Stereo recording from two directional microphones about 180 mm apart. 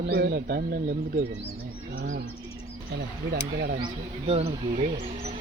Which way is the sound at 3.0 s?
65° right (ahead or behind).